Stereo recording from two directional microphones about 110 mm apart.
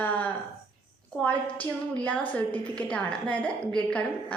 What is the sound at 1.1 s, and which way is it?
A woman's voice, 10° left (ahead or behind).